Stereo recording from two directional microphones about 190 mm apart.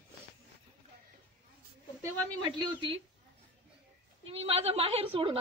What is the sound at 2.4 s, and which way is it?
Speech, 25° right (ahead or behind).